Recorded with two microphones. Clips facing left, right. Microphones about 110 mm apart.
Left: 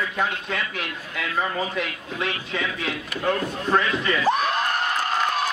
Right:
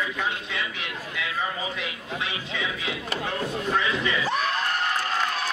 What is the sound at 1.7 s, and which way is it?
Speech, 50° left (ahead or behind).